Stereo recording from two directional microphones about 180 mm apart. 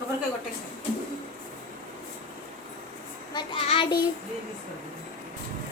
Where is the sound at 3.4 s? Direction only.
30° left (ahead or behind).